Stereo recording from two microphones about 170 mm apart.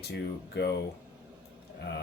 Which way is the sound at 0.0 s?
75° left (ahead or behind).